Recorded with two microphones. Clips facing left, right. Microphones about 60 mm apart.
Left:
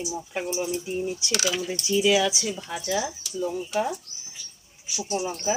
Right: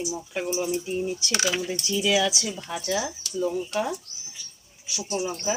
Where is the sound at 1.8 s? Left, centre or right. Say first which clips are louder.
Left 3 dB; centre.